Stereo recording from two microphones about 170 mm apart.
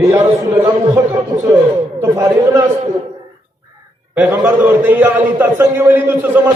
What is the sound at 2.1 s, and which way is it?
Speech, 20° right (ahead or behind).